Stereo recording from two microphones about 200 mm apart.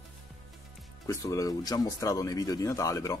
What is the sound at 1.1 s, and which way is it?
A man's voice, 15° left (ahead or behind).